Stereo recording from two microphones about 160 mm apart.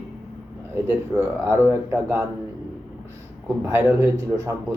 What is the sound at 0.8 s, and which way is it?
Speech, 15° right (ahead or behind).